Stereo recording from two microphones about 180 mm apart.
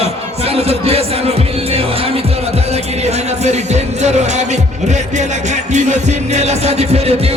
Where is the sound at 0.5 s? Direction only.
35° right (ahead or behind).